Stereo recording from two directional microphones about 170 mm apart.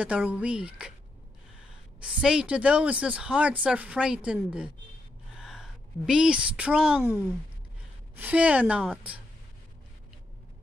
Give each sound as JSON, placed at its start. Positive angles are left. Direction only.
{"t": 0.0, "sound": "speech", "side_deg": -5}
{"t": 2.0, "sound": "a woman's voice", "side_deg": -5}